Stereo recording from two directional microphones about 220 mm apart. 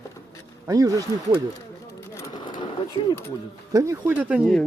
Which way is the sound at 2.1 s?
15° left (ahead or behind).